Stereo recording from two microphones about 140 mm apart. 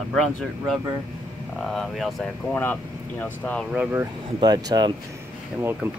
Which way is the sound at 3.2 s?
10° left (ahead or behind).